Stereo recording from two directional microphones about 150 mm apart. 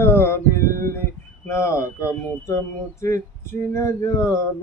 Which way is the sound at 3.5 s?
15° left (ahead or behind).